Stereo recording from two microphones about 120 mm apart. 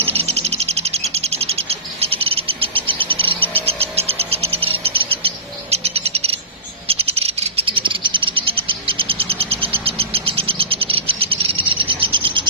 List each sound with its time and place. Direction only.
0.0 s bird: 55° right (ahead or behind)
6.9 s cricket: 55° right (ahead or behind)